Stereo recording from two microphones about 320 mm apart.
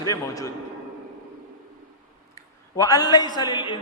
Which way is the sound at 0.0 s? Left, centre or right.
Centre.